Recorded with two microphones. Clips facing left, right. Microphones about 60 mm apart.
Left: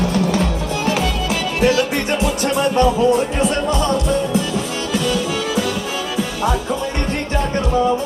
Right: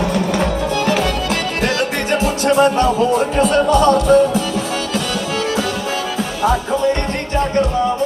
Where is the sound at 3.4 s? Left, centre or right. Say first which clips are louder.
Right 5 dB; right.